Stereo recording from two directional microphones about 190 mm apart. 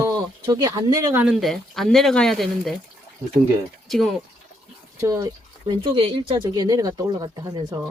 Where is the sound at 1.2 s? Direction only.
Centre (ahead or behind).